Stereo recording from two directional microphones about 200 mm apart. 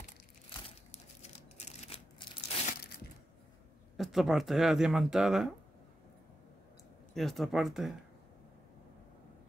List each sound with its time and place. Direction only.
0.5 s crumpling: 30° left (ahead or behind)
3.9 s speech: centre (ahead or behind)
7.2 s speech: centre (ahead or behind)